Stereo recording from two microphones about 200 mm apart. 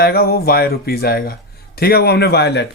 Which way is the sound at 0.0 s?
50° left (ahead or behind).